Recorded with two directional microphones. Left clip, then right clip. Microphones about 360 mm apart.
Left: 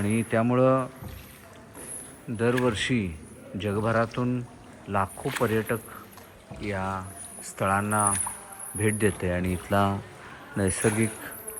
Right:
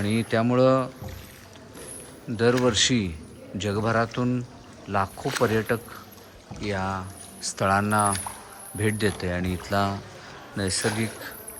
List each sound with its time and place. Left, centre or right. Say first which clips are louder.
0.0 s speech: right 1 dB; centre
2.3 s speech: right 4 dB; centre
10.7 s speech: even; right
11.0 s speech: left 1 dB; centre